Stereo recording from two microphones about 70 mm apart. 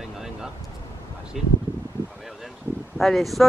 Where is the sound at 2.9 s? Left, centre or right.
Centre.